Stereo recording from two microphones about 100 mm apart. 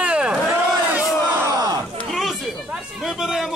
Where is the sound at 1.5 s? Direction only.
40° right (ahead or behind).